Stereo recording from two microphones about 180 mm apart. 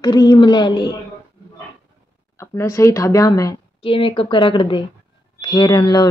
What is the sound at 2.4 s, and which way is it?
Speech, 15° left (ahead or behind).